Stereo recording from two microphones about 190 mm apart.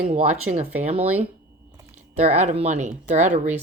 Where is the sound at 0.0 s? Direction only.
35° right (ahead or behind).